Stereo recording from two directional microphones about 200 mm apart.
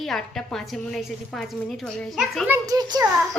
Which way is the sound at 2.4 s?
10° right (ahead or behind).